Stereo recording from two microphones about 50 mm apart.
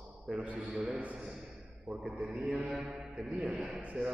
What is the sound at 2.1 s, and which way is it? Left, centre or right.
Speech, right.